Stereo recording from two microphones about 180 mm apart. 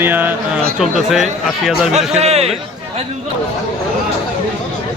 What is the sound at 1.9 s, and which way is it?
Speech, 35° right (ahead or behind).